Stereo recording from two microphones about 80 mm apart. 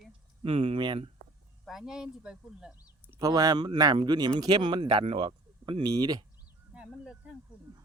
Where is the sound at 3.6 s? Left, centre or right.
Right.